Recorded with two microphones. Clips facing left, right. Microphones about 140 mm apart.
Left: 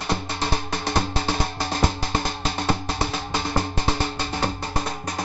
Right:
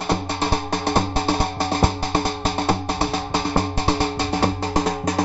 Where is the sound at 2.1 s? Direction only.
55° right (ahead or behind).